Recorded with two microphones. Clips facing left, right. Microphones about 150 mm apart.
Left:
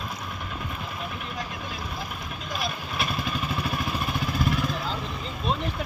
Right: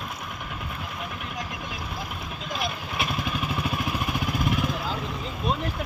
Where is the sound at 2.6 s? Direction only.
20° right (ahead or behind).